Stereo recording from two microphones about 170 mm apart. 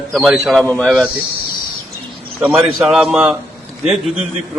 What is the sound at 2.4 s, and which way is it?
Speech, 5° right (ahead or behind).